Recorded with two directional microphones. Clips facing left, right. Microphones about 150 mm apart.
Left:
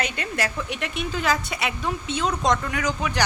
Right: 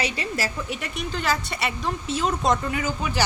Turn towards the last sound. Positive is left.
turn(degrees=-5)  # may be behind; listen again after turning